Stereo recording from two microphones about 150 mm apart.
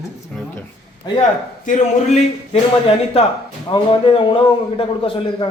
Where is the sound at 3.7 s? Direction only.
35° left (ahead or behind).